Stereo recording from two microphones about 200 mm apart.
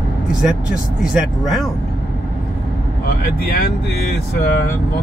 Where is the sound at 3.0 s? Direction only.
50° left (ahead or behind).